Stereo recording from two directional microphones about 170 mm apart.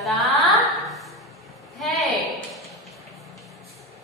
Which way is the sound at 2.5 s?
Centre (ahead or behind).